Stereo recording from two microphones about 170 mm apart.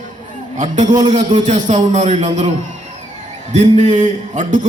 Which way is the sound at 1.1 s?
45° right (ahead or behind).